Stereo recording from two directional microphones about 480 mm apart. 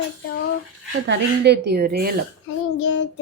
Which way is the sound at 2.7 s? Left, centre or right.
Left.